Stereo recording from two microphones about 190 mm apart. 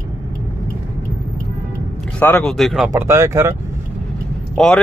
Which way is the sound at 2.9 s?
15° right (ahead or behind).